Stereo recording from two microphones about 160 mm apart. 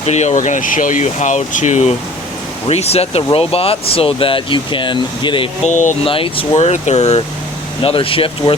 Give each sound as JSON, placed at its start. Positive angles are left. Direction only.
{"t": 0.0, "sound": "speech", "side_deg": 45}
{"t": 5.6, "sound": "speech", "side_deg": 50}
{"t": 6.1, "sound": "speech", "side_deg": 35}